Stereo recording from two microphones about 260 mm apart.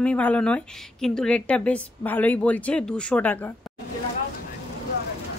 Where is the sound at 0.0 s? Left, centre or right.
Centre.